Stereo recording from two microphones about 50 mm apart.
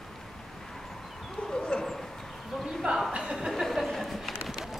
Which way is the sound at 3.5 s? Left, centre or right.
Centre.